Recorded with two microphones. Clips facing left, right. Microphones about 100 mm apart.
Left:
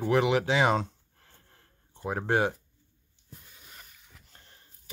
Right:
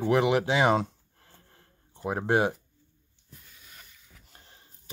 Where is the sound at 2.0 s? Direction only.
10° right (ahead or behind).